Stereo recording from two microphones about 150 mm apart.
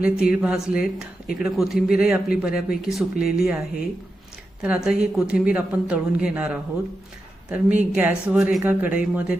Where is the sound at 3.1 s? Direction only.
85° left.